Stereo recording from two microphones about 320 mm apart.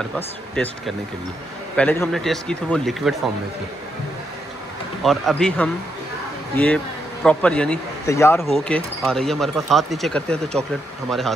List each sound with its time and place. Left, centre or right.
1.8 s speech: centre
5.0 s speech: centre